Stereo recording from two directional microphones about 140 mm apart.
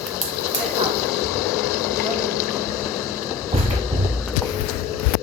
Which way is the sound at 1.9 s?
25° left (ahead or behind).